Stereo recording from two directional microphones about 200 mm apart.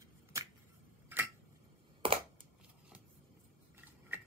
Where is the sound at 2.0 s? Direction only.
25° right (ahead or behind).